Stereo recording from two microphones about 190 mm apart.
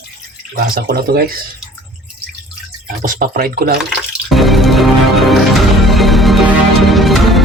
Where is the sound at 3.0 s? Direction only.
50° right (ahead or behind).